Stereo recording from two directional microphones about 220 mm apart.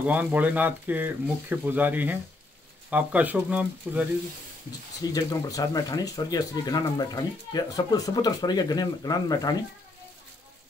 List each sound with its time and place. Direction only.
0.0 s speech: 5° right (ahead or behind)
5.0 s speech: 15° left (ahead or behind)